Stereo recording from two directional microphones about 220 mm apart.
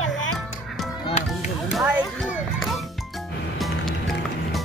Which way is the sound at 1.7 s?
Centre (ahead or behind).